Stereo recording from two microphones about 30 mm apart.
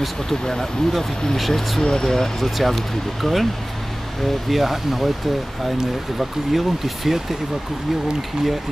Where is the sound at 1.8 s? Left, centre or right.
Centre.